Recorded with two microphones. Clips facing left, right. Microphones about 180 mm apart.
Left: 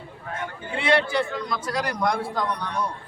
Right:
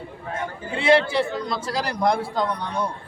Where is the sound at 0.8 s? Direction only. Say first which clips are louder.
Right 4 dB; 25° right (ahead or behind).